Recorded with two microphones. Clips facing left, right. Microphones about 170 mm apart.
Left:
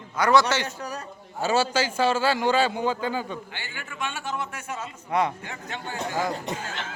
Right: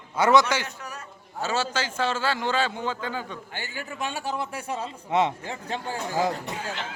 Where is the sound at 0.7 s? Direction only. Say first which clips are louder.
Left 5 dB; 35° left (ahead or behind).